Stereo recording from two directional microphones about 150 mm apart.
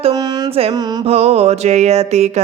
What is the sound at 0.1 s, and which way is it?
Carnatic music, 25° right (ahead or behind).